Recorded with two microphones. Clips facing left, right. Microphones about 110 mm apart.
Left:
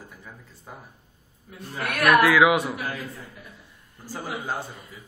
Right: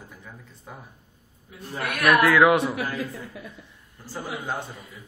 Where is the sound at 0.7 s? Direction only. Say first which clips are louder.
Right 1 dB; centre (ahead or behind).